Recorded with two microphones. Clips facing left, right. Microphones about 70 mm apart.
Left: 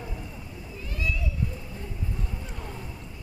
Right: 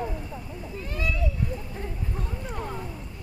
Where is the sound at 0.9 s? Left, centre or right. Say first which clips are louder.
Right 1 dB; right.